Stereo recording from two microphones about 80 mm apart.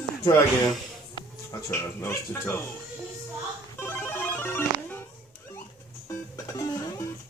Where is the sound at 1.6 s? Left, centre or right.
Left.